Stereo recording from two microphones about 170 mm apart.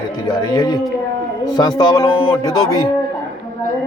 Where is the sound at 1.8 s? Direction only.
25° left (ahead or behind).